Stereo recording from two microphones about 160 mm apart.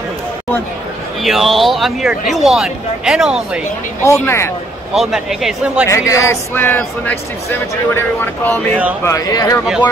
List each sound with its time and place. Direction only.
1.2 s speech: centre (ahead or behind)
4.0 s speech: 15° left (ahead or behind)
4.9 s speech: centre (ahead or behind)
5.9 s speech: 20° left (ahead or behind)
9.0 s speech: 20° left (ahead or behind)